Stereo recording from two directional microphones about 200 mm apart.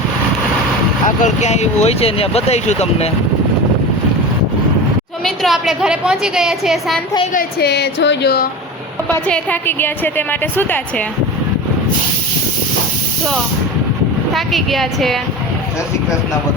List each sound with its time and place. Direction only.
1.0 s speech: 35° left (ahead or behind)
5.2 s a woman's voice: centre (ahead or behind)
7.3 s a woman's voice: 55° left (ahead or behind)
9.2 s a woman's voice: 5° left (ahead or behind)
14.3 s a woman's voice: centre (ahead or behind)